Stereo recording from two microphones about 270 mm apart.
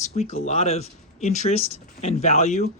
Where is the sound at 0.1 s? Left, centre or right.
Left.